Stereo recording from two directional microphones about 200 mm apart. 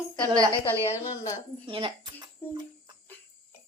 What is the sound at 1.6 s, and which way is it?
Speech, 25° right (ahead or behind).